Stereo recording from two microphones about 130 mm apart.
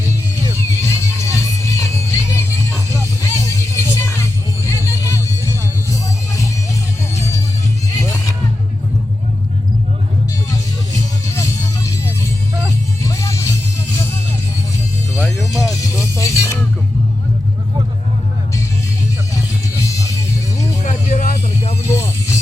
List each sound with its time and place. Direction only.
0.8 s music: 20° left (ahead or behind)
11.3 s music: 25° left (ahead or behind)
13.0 s music: 25° left (ahead or behind)
15.6 s music: 25° left (ahead or behind)
19.8 s music: 25° left (ahead or behind)
20.8 s music: 80° left; by 21.8 s 55° left (ahead or behind)
21.8 s music: 20° left (ahead or behind)